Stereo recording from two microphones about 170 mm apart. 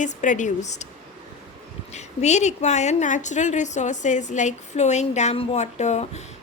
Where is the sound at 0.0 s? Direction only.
45° left (ahead or behind).